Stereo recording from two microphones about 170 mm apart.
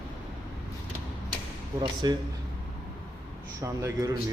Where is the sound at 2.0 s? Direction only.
25° right (ahead or behind).